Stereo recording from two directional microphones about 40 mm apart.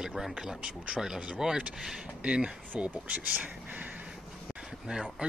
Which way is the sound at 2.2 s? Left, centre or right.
Right.